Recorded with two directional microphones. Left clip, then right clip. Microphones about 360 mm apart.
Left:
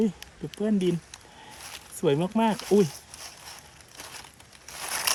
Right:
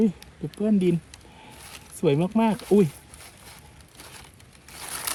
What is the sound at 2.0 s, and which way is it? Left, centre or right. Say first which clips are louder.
Speech: right 2 dB; centre.